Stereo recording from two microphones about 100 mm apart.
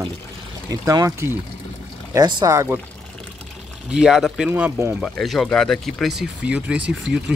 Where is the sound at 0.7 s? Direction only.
35° right (ahead or behind).